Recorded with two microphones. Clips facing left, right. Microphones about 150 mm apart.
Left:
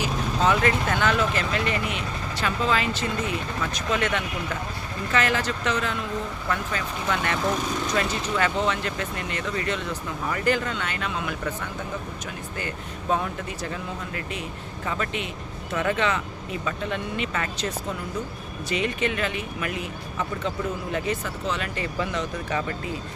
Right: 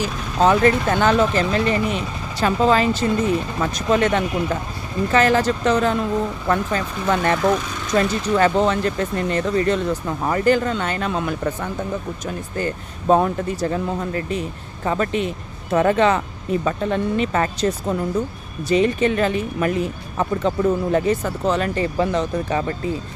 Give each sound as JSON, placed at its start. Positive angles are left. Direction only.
{"t": 0.0, "sound": "speech", "side_deg": -35}